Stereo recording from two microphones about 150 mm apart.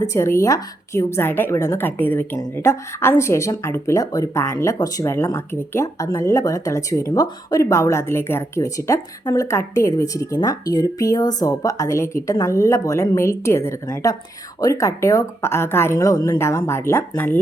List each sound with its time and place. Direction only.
0.0 s a woman's voice: 20° left (ahead or behind)